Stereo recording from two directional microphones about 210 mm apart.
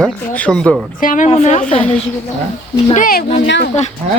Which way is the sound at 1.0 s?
40° left (ahead or behind).